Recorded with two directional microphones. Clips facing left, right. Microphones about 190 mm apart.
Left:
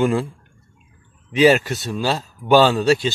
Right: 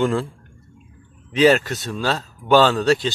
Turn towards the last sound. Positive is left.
turn(degrees=10)  # may be behind; listen again after turning